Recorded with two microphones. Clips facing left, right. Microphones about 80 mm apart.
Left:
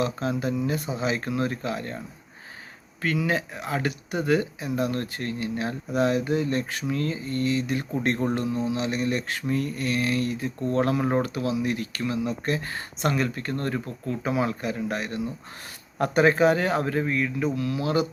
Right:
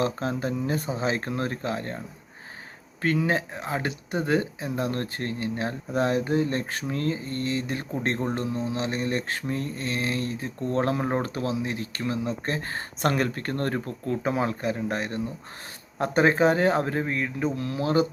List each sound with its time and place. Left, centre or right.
0.0 s speech: right
3.0 s speech: right